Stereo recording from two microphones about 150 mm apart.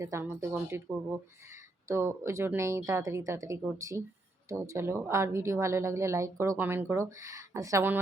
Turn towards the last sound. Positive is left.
turn(degrees=-15)  # may be behind; listen again after turning